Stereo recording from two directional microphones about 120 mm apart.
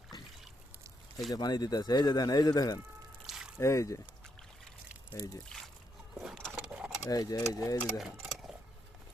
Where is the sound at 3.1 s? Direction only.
5° right (ahead or behind).